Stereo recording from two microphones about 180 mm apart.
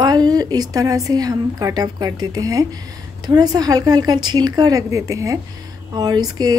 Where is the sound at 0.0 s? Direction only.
20° right (ahead or behind).